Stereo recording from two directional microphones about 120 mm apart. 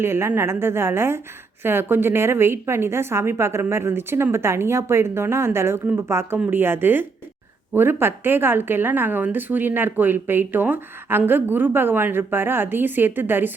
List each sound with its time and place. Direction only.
0.0 s a woman's voice: 20° right (ahead or behind)